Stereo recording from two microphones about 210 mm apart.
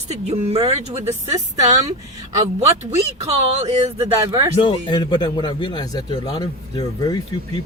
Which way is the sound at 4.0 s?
15° right (ahead or behind).